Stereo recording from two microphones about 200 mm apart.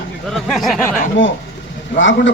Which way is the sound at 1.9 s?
70° left (ahead or behind).